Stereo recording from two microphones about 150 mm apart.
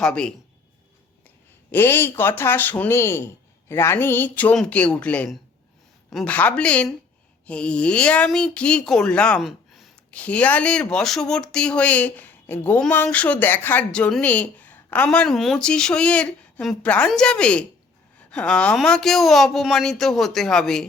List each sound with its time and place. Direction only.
0.0 s a woman's voice: 5° left (ahead or behind)
1.7 s speech: 15° left (ahead or behind); by 9.9 s centre (ahead or behind)
10.1 s a woman's voice: 10° left (ahead or behind)